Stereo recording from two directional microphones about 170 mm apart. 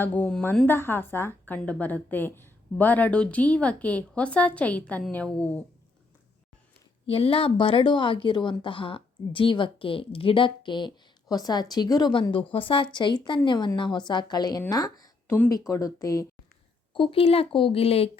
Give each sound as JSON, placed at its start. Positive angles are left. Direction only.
{"t": 0.0, "sound": "a woman's voice", "side_deg": 10}
{"t": 7.1, "sound": "a woman's voice", "side_deg": 30}
{"t": 16.9, "sound": "speech", "side_deg": 30}